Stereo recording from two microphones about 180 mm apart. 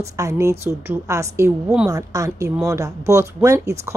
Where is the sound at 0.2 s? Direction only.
15° right (ahead or behind).